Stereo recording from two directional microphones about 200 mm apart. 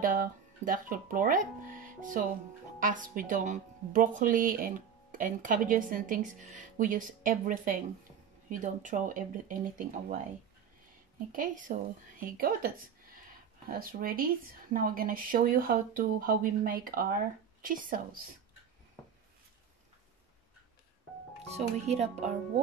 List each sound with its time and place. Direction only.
0.0 s speech: 45° right (ahead or behind)
11.3 s speech: 40° right (ahead or behind)
21.5 s speech: 35° right (ahead or behind)